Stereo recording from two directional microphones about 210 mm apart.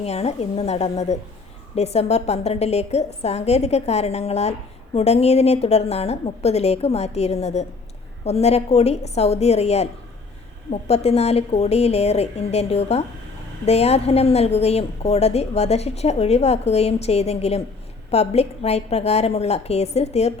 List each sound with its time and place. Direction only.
0.0 s a woman's voice: 30° left (ahead or behind)